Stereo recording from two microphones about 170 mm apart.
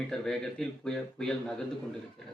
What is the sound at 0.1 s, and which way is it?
Speech, 5° left (ahead or behind).